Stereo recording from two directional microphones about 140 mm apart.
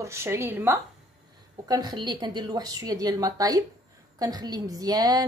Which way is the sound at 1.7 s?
30° right (ahead or behind).